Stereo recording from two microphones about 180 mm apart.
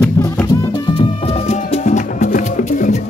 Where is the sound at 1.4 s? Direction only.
40° left (ahead or behind).